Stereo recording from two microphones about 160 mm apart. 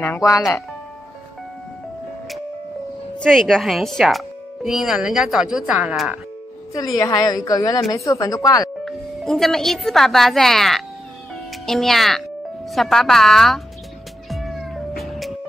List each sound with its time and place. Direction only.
0.0 s speech: 15° left (ahead or behind)
3.2 s a woman's voice: centre (ahead or behind)
7.0 s a woman's voice: 25° left (ahead or behind)
8.8 s a woman's voice: centre (ahead or behind)
14.3 s cat: centre (ahead or behind)